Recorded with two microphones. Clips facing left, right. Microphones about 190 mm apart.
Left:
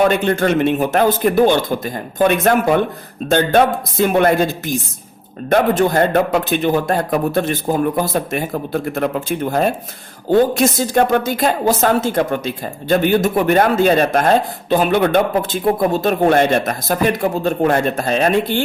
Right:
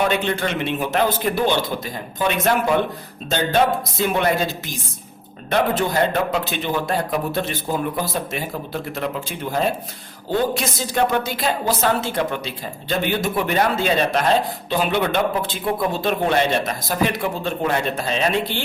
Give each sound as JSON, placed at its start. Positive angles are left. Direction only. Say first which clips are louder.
{"t": 0.0, "sound": "a woman's voice", "louder": "left 6 dB", "side_deg": 50}